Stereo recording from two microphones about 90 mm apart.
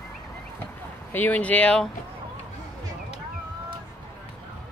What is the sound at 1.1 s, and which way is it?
Speech, 20° left (ahead or behind).